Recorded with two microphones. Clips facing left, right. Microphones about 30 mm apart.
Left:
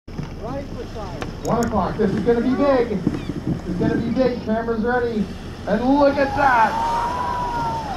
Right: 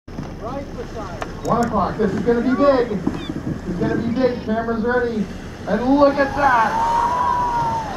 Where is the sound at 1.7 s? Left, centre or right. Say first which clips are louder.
Right 1 dB; centre.